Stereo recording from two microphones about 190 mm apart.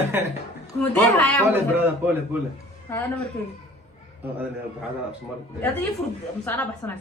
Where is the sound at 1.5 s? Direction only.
10° right (ahead or behind).